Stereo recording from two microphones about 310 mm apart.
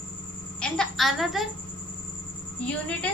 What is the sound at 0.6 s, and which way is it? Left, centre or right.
Speech, centre.